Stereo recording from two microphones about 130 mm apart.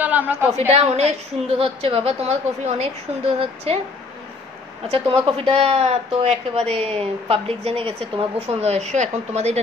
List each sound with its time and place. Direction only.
0.0 s a sound: 10° right (ahead or behind)
0.5 s a woman's voice: 55° right (ahead or behind)
4.8 s speech: 45° right (ahead or behind)